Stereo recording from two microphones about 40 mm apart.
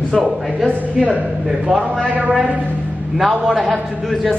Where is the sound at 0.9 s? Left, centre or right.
Right.